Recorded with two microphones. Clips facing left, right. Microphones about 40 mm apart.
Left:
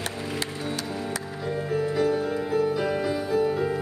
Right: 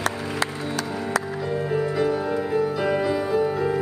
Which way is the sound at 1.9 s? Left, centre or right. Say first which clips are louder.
Right 1 dB; centre.